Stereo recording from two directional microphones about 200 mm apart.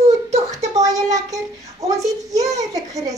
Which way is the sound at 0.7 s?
15° right (ahead or behind).